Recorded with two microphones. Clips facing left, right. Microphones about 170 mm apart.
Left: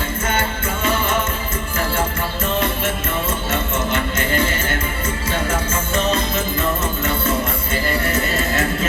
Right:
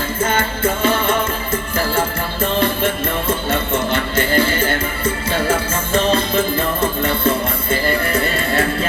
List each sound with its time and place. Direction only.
0.3 s music: 30° right (ahead or behind)